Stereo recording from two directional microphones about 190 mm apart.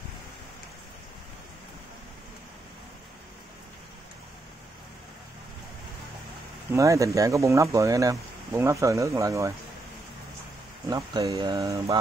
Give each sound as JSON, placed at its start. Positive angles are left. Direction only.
{"t": 6.7, "sound": "speech", "side_deg": -15}
{"t": 10.9, "sound": "speech", "side_deg": -15}